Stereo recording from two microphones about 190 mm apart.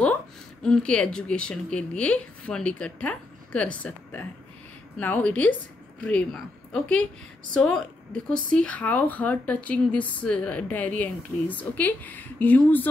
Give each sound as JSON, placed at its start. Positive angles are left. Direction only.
{"t": 0.0, "sound": "a woman's voice", "side_deg": 5}